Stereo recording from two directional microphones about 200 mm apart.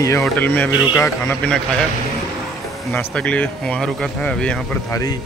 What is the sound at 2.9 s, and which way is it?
Speech, 5° left (ahead or behind).